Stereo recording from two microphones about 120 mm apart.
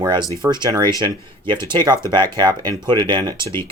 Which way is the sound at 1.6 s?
40° right (ahead or behind).